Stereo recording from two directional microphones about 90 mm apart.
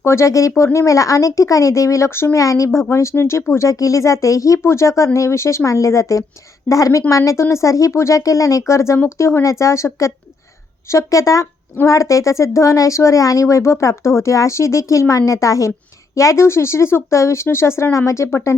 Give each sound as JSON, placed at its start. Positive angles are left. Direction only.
{"t": 0.0, "sound": "speech", "side_deg": 30}